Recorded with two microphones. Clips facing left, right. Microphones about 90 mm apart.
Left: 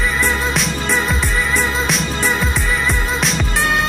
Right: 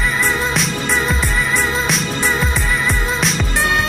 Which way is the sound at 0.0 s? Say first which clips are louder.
Even; centre (ahead or behind).